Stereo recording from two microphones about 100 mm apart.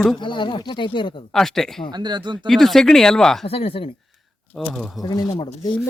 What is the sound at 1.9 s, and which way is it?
Speech, 45° right (ahead or behind).